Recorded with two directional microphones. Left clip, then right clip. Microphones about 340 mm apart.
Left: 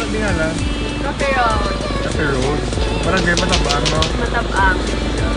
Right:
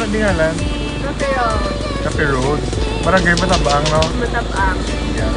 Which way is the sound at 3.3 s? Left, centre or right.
Left.